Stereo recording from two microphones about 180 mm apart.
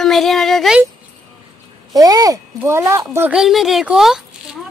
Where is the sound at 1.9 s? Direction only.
20° right (ahead or behind); by 4.2 s centre (ahead or behind).